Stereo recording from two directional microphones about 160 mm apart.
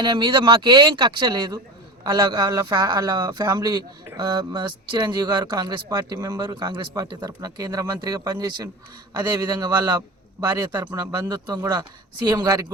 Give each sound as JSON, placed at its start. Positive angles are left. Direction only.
{"t": 0.0, "sound": "speech", "side_deg": -30}